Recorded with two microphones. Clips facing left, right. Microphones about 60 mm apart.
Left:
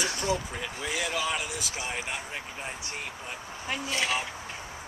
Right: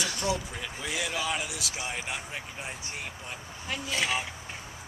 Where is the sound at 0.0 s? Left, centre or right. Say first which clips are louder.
Left 1 dB; left.